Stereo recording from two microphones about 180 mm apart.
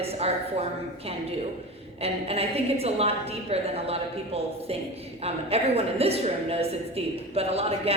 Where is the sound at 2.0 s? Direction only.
35° right (ahead or behind).